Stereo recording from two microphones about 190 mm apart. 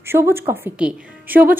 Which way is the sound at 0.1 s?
15° right (ahead or behind).